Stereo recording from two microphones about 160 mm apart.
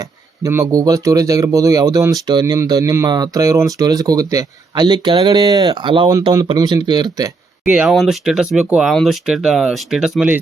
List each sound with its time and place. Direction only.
0.4 s speech: 20° right (ahead or behind)
7.6 s speech: 5° right (ahead or behind)